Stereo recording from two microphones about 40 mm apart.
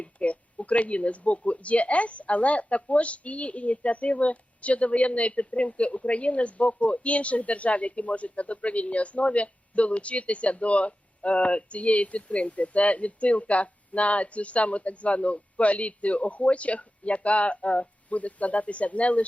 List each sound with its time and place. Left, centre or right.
0.0 s speech: left